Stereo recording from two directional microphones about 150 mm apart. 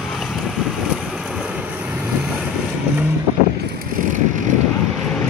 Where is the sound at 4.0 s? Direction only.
60° right (ahead or behind).